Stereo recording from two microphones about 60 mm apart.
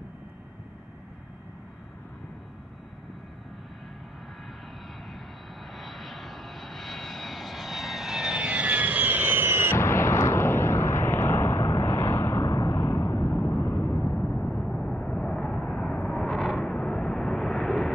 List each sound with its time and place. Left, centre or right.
5.8 s vehicle: centre; by 9.8 s right
9.8 s a sound: left
13.3 s vehicle: left
14.1 s vehicle: centre
16.2 s vehicle: centre